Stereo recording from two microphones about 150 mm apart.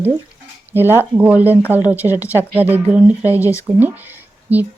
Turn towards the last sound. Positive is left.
turn(degrees=-10)  # may be behind; listen again after turning